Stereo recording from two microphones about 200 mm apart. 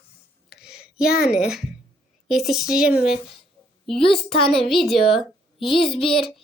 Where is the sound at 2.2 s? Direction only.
Centre (ahead or behind).